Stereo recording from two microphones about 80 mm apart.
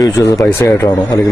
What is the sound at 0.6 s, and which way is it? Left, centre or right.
Speech, left.